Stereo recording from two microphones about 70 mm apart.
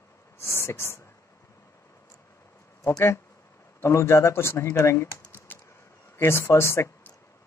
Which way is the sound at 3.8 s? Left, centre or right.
Left.